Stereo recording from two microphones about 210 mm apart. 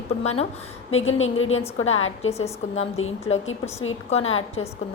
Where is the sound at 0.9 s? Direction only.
70° left (ahead or behind).